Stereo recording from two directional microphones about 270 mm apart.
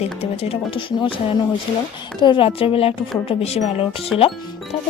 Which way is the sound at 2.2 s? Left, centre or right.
Centre.